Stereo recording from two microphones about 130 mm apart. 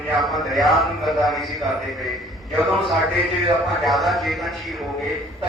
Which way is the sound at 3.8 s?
Centre (ahead or behind).